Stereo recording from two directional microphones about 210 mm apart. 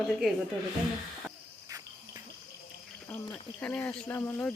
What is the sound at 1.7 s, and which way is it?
Cricket, 15° right (ahead or behind).